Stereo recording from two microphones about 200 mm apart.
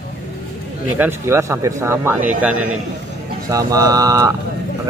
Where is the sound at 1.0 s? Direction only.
10° right (ahead or behind).